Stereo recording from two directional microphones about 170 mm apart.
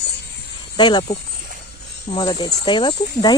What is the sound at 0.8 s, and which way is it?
Speech, 25° left (ahead or behind).